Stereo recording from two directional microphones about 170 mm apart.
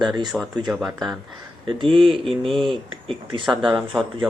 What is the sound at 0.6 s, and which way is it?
Speech, centre (ahead or behind).